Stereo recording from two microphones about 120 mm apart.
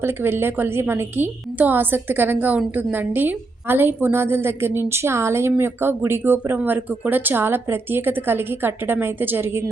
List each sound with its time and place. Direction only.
0.0 s a woman's voice: 20° right (ahead or behind)